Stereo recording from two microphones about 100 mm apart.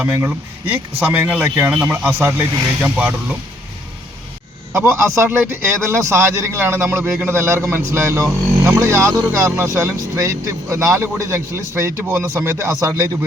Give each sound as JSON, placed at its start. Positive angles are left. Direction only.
{"t": 0.0, "sound": "a man's voice", "side_deg": -20}
{"t": 4.7, "sound": "a man's voice", "side_deg": -25}